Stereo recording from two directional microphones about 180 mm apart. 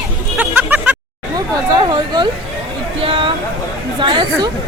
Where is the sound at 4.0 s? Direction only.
25° right (ahead or behind).